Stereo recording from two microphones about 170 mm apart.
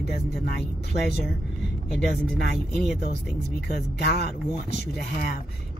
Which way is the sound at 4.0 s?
65° left (ahead or behind).